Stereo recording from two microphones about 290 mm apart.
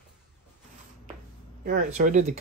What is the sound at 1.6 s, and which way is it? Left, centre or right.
Speech, right.